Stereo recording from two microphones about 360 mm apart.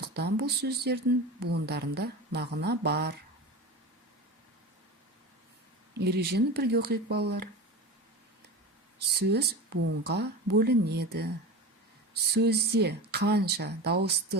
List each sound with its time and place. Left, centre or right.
0.0 s speech: right
5.9 s speech: right
9.0 s speech: right